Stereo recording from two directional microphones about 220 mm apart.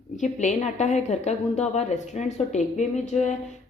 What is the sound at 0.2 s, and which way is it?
A woman's voice, 35° left (ahead or behind).